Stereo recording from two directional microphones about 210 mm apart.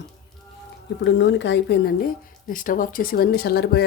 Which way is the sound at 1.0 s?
55° left (ahead or behind).